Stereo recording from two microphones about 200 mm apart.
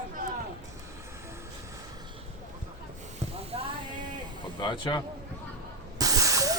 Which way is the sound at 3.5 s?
30° right (ahead or behind).